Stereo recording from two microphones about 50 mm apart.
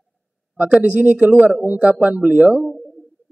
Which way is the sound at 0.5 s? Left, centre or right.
Right.